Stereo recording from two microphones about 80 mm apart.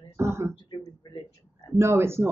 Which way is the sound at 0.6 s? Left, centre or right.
Left.